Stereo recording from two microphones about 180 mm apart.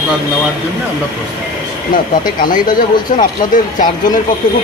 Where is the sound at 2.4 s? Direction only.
50° left (ahead or behind).